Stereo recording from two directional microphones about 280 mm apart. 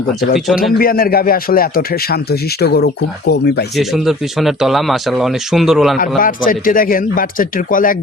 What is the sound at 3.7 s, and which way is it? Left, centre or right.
Speech, centre.